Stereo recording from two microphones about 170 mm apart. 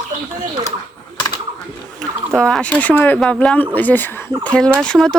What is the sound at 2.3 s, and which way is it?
Speech, 5° left (ahead or behind).